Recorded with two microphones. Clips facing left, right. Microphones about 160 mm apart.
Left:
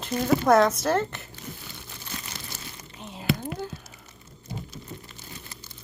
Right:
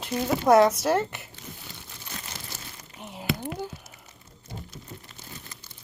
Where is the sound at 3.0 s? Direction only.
15° right (ahead or behind).